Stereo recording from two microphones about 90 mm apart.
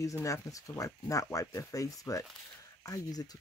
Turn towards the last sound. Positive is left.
turn(degrees=45)  # may be behind; listen again after turning